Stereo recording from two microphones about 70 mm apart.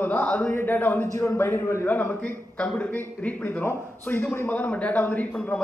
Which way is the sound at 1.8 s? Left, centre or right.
Left.